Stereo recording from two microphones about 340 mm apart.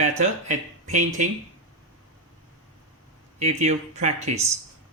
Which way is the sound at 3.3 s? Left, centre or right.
Centre.